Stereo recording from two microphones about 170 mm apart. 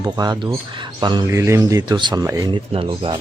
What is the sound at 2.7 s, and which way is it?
Speech, 30° right (ahead or behind).